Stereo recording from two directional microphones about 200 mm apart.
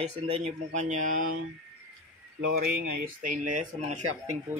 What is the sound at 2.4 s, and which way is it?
Speech, 50° right (ahead or behind).